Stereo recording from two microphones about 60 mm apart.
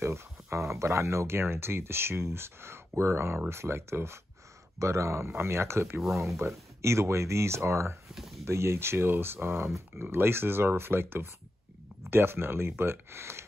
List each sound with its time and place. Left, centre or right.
0.0 s speech: right
5.9 s speech: centre
6.2 s speech: right